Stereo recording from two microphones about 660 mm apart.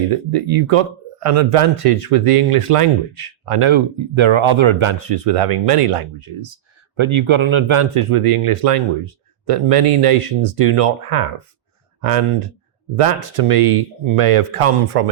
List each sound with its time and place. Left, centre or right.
0.1 s speech: right